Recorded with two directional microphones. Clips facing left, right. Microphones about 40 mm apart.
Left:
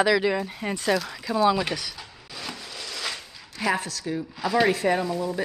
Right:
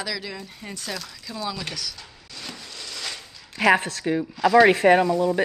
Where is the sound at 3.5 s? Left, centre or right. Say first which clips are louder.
Right 7 dB; right.